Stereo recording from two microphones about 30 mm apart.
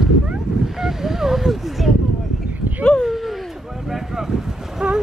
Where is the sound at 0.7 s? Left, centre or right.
Centre.